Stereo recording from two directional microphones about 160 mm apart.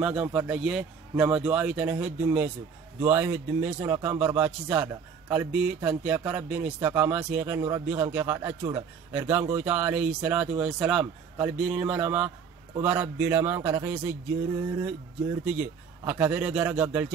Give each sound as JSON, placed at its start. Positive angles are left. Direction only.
{"t": 0.0, "sound": "speech", "side_deg": -10}